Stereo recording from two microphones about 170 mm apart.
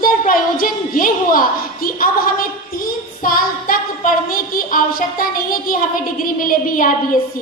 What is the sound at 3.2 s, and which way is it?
A child's voice, 55° left (ahead or behind).